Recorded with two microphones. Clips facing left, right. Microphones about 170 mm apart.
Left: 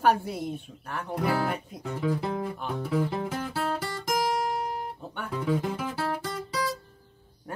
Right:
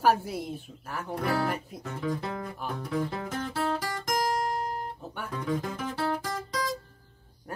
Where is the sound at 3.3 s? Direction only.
5° left (ahead or behind).